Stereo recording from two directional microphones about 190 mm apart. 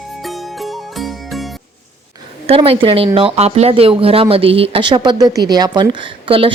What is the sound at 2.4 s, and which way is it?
Speech, 30° right (ahead or behind).